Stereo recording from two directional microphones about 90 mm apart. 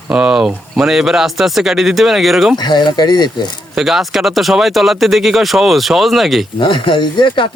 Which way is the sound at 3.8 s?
5° right (ahead or behind).